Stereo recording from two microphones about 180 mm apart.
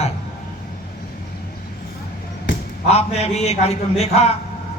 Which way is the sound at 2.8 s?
35° left (ahead or behind).